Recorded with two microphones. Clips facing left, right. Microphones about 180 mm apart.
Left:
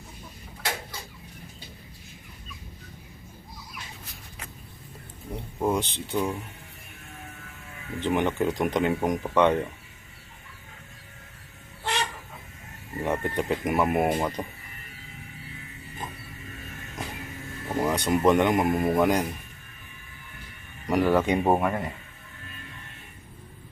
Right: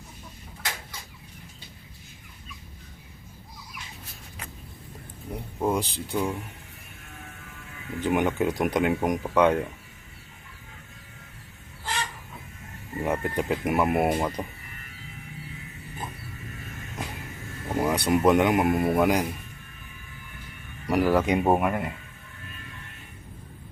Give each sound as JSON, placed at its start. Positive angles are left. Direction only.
{"t": 5.5, "sound": "speech", "side_deg": 0}
{"t": 8.0, "sound": "speech", "side_deg": -10}
{"t": 11.8, "sound": "chicken", "side_deg": 70}
{"t": 13.0, "sound": "speech", "side_deg": -5}
{"t": 17.7, "sound": "speech", "side_deg": -10}
{"t": 20.8, "sound": "speech", "side_deg": -5}